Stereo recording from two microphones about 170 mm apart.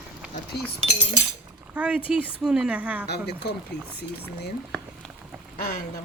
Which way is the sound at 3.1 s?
70° left (ahead or behind).